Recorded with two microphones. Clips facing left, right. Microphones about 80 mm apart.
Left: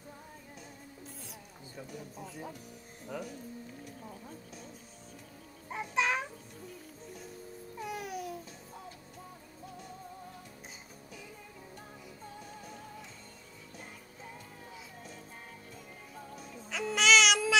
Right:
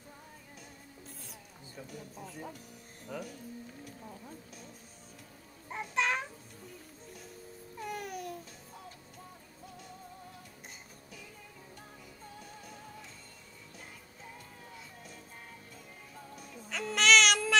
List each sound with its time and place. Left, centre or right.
1.8 s speech: centre
5.7 s music: centre
7.8 s music: centre
16.3 s music: centre